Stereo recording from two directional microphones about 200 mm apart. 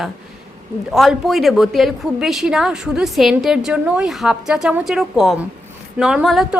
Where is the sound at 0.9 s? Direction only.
Centre (ahead or behind).